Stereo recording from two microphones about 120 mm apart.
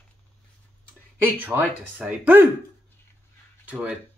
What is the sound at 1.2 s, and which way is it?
Speech, 15° right (ahead or behind).